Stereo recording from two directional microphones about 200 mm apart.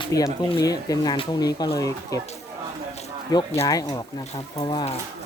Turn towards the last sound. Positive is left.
turn(degrees=25)  # may be behind; listen again after turning